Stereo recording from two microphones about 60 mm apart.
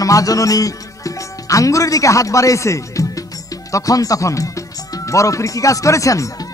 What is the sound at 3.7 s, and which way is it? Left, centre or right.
Music, left.